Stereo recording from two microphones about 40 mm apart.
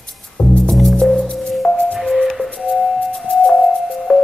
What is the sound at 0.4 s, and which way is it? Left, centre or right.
Music, left.